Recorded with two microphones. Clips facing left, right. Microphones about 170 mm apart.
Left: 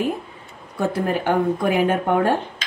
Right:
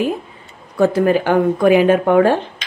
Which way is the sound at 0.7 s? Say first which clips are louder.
Right 8 dB; 90° right.